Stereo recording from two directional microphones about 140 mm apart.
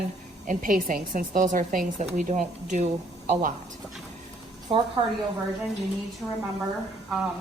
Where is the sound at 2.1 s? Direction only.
60° right (ahead or behind).